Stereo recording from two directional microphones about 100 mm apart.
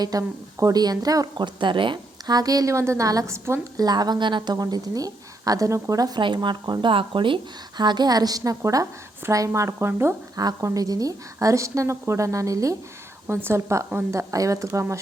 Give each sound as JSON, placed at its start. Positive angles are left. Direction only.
{"t": 0.0, "sound": "a woman's voice", "side_deg": -35}
{"t": 1.5, "sound": "a woman's voice", "side_deg": -55}
{"t": 3.8, "sound": "a woman's voice", "side_deg": -45}
{"t": 7.8, "sound": "a woman's voice", "side_deg": -45}
{"t": 10.3, "sound": "a woman's voice", "side_deg": -40}